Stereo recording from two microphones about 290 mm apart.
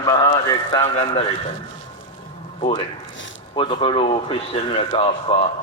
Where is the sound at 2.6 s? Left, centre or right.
Centre.